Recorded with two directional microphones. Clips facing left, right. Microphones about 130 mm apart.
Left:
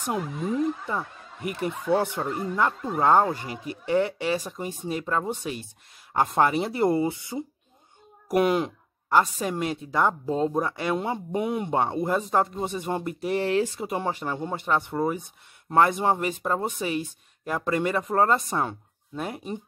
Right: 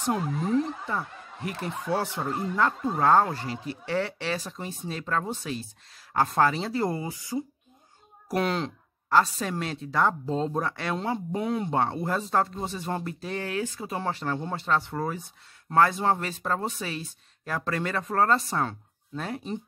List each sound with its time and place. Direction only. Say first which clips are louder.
0.0 s speech: right 1 dB; 15° left (ahead or behind)